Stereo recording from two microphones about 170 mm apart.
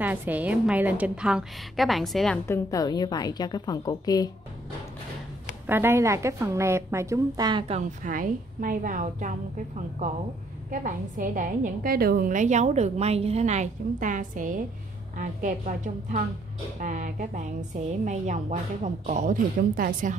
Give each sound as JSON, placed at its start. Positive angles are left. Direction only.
{"t": 0.0, "sound": "a woman's voice", "side_deg": -10}
{"t": 2.4, "sound": "a woman's voice", "side_deg": 15}
{"t": 5.7, "sound": "a woman's voice", "side_deg": -15}
{"t": 8.0, "sound": "a woman's voice", "side_deg": -55}